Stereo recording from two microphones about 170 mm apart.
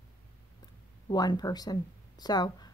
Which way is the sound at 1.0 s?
25° left (ahead or behind).